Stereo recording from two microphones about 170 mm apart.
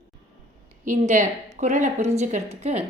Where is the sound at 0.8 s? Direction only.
45° right (ahead or behind).